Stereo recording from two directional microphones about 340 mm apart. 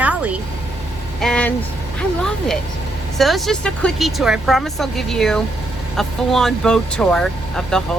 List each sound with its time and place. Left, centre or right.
0.0 s vehicle: centre
1.2 s speech: centre